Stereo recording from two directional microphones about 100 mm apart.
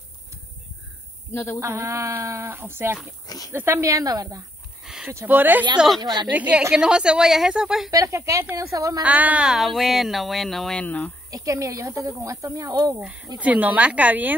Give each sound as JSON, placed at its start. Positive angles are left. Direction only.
{"t": 1.3, "sound": "speech", "side_deg": 25}
{"t": 1.6, "sound": "speech", "side_deg": -30}
{"t": 3.3, "sound": "speech", "side_deg": 40}
{"t": 3.5, "sound": "speech", "side_deg": -25}
{"t": 4.8, "sound": "a sound", "side_deg": -5}
{"t": 5.1, "sound": "speech", "side_deg": -20}
{"t": 5.9, "sound": "a woman's voice", "side_deg": -45}
{"t": 6.7, "sound": "speech", "side_deg": -10}
{"t": 7.9, "sound": "speech", "side_deg": -30}
{"t": 9.0, "sound": "speech", "side_deg": -15}
{"t": 11.2, "sound": "speech", "side_deg": -35}
{"t": 13.0, "sound": "speech", "side_deg": -15}